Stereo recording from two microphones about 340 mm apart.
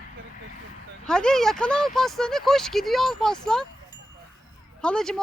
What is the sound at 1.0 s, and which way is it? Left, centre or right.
Speech, centre.